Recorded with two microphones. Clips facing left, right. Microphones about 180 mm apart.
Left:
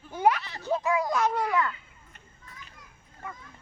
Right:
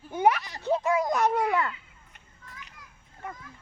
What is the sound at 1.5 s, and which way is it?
Speech, 30° right (ahead or behind).